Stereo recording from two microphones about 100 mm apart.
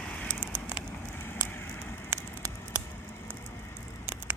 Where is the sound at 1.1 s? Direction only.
25° left (ahead or behind).